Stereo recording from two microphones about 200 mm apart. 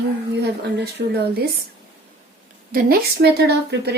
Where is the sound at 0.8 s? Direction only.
55° right (ahead or behind).